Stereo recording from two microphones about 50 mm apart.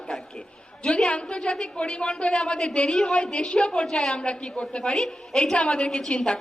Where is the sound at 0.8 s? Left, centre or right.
Centre.